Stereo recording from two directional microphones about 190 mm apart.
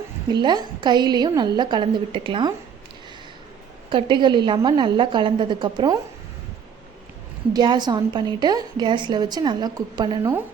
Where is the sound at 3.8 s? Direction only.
25° right (ahead or behind).